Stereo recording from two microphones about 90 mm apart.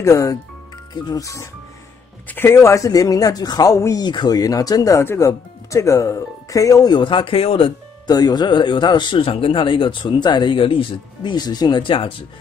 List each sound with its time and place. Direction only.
0.0 s speech: 35° left (ahead or behind)
2.2 s speech: 25° left (ahead or behind)
4.0 s speech: 50° left (ahead or behind); by 7.7 s 90° left
8.1 s speech: 50° left (ahead or behind); by 11.3 s 80° left
11.3 s speech: 50° left (ahead or behind); by 12.1 s 70° left (ahead or behind)